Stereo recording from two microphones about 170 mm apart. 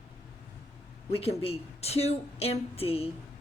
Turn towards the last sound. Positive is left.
turn(degrees=35)  # may be behind; listen again after turning